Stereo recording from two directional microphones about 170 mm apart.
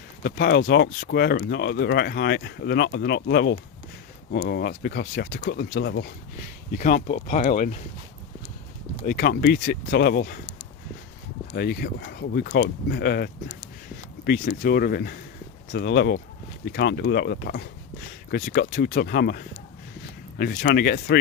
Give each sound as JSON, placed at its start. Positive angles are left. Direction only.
{"t": 0.2, "sound": "speech", "side_deg": 65}
{"t": 6.7, "sound": "speech", "side_deg": 50}
{"t": 9.0, "sound": "speech", "side_deg": 65}
{"t": 11.5, "sound": "speech", "side_deg": 70}
{"t": 15.7, "sound": "speech", "side_deg": 75}
{"t": 18.3, "sound": "speech", "side_deg": 60}